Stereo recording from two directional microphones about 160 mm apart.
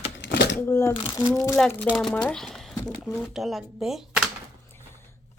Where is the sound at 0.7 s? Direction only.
20° left (ahead or behind).